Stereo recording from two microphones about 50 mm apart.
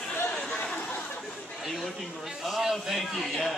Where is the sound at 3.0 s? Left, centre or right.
Centre.